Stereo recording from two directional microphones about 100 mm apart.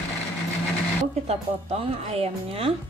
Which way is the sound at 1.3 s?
90° right.